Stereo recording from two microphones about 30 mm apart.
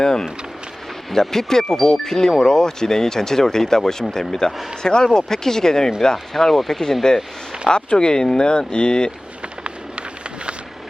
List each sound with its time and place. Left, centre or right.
0.0 s speech: left
6.3 s speech: centre
7.0 s speech: left